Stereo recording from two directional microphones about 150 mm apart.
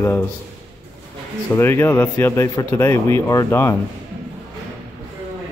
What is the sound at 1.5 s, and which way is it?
Speech, 15° left (ahead or behind).